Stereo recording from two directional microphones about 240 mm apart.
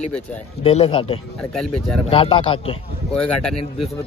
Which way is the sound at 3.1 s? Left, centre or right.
Centre.